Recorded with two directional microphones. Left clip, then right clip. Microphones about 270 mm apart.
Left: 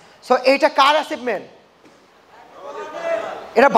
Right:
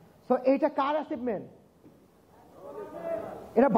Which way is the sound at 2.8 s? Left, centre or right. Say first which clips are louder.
Left 11 dB; centre.